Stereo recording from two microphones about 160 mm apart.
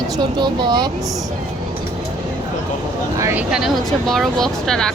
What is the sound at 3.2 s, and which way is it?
Speech, 15° right (ahead or behind).